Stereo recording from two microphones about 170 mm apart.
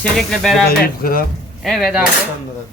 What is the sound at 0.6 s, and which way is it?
Speech, 60° left (ahead or behind).